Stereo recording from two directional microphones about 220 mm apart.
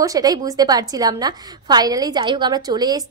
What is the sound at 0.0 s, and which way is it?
A woman's voice, 15° right (ahead or behind).